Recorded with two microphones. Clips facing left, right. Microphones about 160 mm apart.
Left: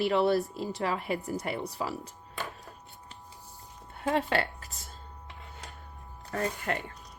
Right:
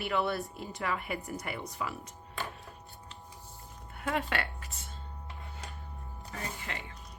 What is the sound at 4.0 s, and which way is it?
Speech, 30° left (ahead or behind).